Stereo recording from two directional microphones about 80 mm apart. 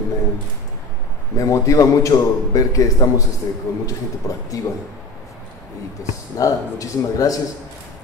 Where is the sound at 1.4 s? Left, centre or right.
Left.